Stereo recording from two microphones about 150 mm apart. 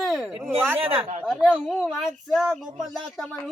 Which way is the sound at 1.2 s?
5° right (ahead or behind).